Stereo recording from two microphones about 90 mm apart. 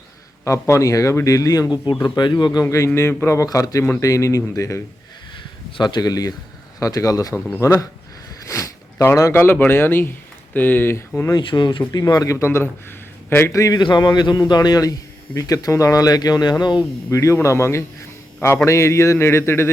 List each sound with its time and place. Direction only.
0.4 s a man's voice: 35° left (ahead or behind)
2.6 s a man's voice: 35° left (ahead or behind)
5.7 s a man's voice: 55° left (ahead or behind); by 7.9 s 35° left (ahead or behind)
8.4 s zipper: 35° left (ahead or behind)
9.3 s a man's voice: 25° left (ahead or behind)
11.3 s speech: 55° left (ahead or behind)
11.9 s a man's voice: 45° left (ahead or behind); by 13.5 s 30° left (ahead or behind)
13.5 s a man's voice: 40° left (ahead or behind)
13.7 s speech: 55° left (ahead or behind)
17.1 s a man's voice: 35° left (ahead or behind)